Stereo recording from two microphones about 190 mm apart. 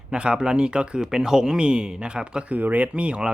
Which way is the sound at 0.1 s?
5° right (ahead or behind).